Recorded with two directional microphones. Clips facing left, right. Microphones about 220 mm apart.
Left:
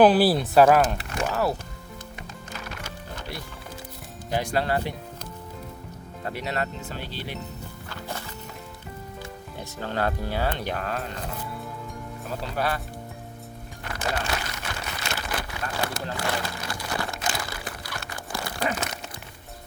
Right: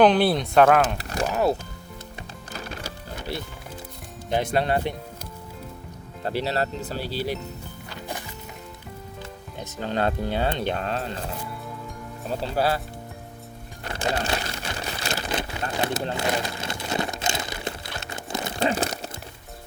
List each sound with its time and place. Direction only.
0.0 s speech: 5° left (ahead or behind)
0.9 s a sound: 35° right (ahead or behind)
1.3 s speech: 20° right (ahead or behind)
2.6 s music: 30° right (ahead or behind)
4.3 s speech: 20° right (ahead or behind)
6.2 s speech: 30° right (ahead or behind)
7.9 s music: 15° right (ahead or behind)
9.8 s speech: 20° right (ahead or behind)
12.4 s speech: 30° right (ahead or behind)
13.8 s a sound: 30° right (ahead or behind)